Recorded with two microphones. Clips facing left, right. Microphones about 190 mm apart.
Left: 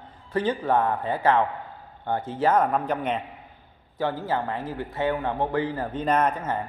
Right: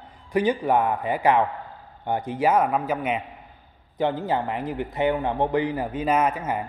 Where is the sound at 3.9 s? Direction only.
20° right (ahead or behind).